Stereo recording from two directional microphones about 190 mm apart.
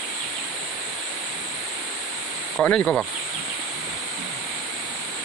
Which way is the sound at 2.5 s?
5° left (ahead or behind).